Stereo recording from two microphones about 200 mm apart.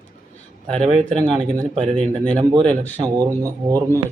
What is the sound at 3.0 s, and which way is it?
Speech, 20° right (ahead or behind).